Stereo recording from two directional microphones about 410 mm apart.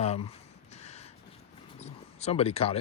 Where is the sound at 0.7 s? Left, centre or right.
Centre.